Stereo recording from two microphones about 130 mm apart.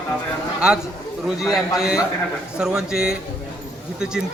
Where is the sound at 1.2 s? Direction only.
5° right (ahead or behind).